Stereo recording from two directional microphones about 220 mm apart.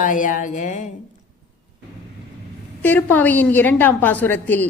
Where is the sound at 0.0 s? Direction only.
35° left (ahead or behind).